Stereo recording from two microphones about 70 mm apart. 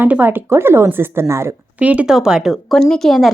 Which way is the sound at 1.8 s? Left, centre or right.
Centre.